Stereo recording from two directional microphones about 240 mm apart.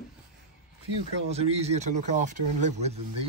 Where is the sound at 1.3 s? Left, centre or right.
Right.